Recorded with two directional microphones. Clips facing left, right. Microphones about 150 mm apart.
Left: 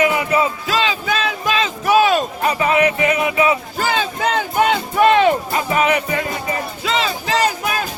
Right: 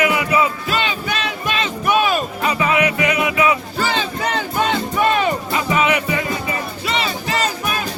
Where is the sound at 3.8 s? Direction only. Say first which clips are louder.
Left 1 dB; 50° left (ahead or behind).